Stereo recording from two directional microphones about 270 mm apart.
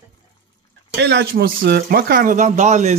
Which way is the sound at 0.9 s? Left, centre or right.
Right.